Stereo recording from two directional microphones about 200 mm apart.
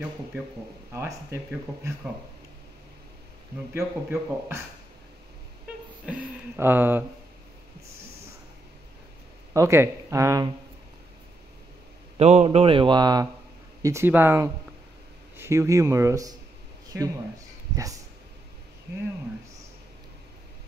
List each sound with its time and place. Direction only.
0.9 s a man's voice: 15° right (ahead or behind)
3.7 s a man's voice: 15° right (ahead or behind)
6.0 s a man's voice: 10° right (ahead or behind)
9.5 s a man's voice: 15° right (ahead or behind)
12.2 s a man's voice: 30° right (ahead or behind); by 18.0 s 15° right (ahead or behind)